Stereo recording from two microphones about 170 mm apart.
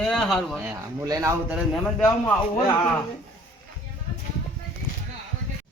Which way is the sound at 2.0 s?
15° left (ahead or behind).